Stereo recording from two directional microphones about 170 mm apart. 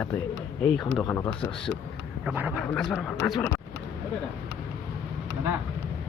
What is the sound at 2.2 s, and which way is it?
Speech, 10° right (ahead or behind).